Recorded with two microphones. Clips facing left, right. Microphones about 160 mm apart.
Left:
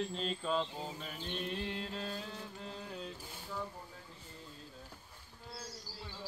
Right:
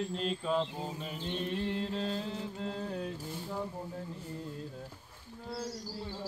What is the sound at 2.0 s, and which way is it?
Music, 25° right (ahead or behind).